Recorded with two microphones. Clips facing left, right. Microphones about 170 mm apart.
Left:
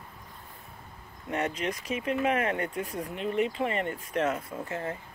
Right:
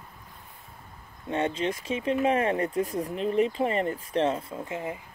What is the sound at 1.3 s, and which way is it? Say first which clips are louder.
Speech: right 3 dB; 30° right (ahead or behind).